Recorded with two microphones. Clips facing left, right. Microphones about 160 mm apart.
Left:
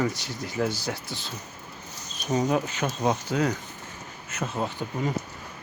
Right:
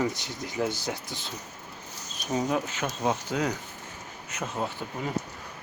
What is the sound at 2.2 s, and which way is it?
Speech, centre (ahead or behind).